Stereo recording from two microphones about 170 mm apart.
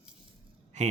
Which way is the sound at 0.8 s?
40° right (ahead or behind).